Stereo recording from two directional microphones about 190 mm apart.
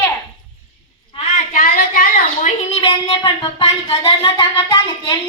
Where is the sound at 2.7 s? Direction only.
30° left (ahead or behind).